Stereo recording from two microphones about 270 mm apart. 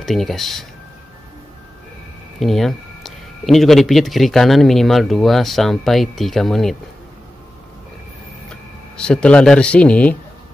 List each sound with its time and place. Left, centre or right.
0.0 s speech: centre
2.4 s speech: centre
8.5 s speech: centre